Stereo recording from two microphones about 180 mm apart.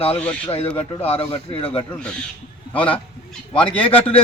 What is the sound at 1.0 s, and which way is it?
Speech, 35° left (ahead or behind).